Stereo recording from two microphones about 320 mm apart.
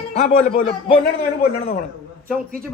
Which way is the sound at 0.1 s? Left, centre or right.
Left.